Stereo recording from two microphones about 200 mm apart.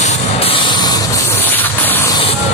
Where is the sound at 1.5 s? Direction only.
10° left (ahead or behind).